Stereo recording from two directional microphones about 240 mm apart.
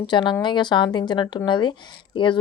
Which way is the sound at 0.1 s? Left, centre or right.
Centre.